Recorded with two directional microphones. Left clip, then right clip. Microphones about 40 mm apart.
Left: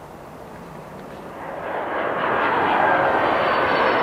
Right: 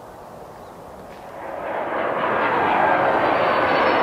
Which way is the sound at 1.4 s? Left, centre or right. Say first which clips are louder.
Right 1 dB; centre.